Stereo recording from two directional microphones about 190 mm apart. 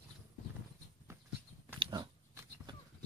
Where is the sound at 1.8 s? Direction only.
25° right (ahead or behind).